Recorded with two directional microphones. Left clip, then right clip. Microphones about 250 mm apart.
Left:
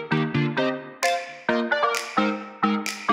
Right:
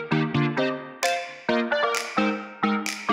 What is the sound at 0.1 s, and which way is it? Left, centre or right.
Music, centre.